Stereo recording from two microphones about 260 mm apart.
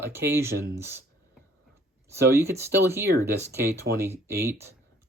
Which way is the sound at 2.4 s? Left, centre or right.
Centre.